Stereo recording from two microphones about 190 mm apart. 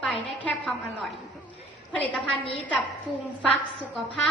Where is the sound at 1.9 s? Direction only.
10° left (ahead or behind).